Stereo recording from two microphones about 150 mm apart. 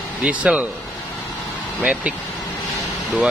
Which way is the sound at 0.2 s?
10° right (ahead or behind).